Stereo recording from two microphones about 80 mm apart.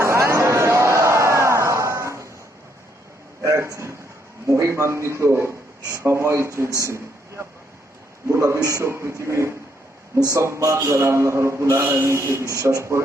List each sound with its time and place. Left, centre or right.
0.0 s music: right
3.4 s a sound: right
4.4 s a man's voice: right